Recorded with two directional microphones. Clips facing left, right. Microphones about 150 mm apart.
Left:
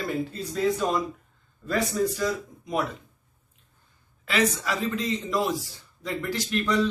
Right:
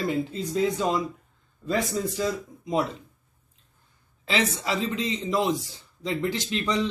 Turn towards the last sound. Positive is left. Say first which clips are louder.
# left 2 dB
turn(degrees=-20)  # may be behind; listen again after turning